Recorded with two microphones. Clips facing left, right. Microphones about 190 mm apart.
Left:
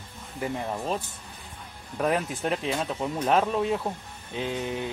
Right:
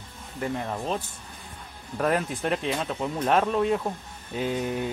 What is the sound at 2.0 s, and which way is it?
Speech, centre (ahead or behind).